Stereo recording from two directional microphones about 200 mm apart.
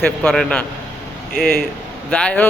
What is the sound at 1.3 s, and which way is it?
Speech, 45° left (ahead or behind).